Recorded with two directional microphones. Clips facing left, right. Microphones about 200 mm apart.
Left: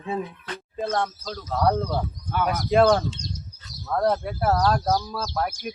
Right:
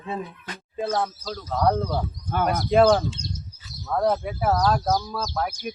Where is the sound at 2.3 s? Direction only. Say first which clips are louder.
Right 2 dB; 45° right (ahead or behind).